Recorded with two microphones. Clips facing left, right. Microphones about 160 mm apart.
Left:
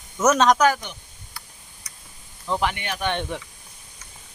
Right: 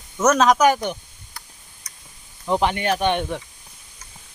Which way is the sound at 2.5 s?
25° right (ahead or behind).